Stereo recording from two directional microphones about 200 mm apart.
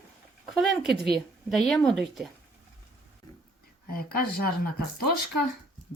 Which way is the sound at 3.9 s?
50° left (ahead or behind).